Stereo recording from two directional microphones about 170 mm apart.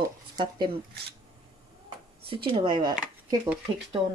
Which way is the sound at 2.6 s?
25° right (ahead or behind).